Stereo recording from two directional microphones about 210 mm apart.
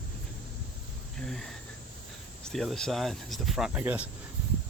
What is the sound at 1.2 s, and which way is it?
Speech, centre (ahead or behind).